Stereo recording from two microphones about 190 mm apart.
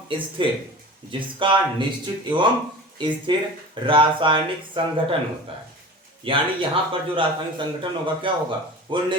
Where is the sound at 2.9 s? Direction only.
25° right (ahead or behind).